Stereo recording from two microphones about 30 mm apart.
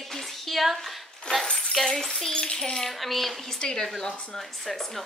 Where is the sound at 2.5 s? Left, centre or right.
Centre.